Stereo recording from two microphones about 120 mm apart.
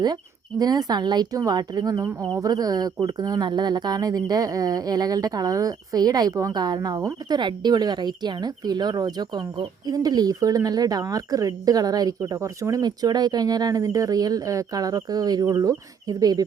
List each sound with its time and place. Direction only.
0.6 s speech: 35° right (ahead or behind)